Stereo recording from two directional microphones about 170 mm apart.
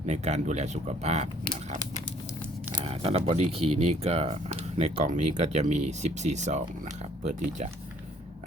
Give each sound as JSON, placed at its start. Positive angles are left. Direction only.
{"t": 0.0, "sound": "speech", "side_deg": -40}
{"t": 2.8, "sound": "speech", "side_deg": -35}